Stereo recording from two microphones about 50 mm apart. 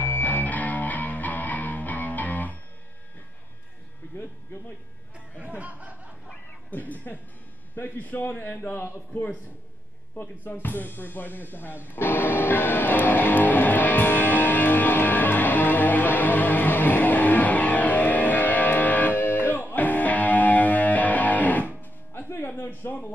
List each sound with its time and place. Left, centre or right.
0.0 s music: left
5.4 s a sound: right
6.2 s cat: left
7.7 s a man's voice: left
10.1 s music: left
19.1 s music: left
22.1 s music: left
22.6 s a sound: left